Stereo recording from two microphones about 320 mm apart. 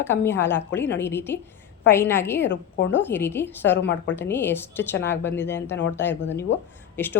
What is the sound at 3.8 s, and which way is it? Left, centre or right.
Speech, left.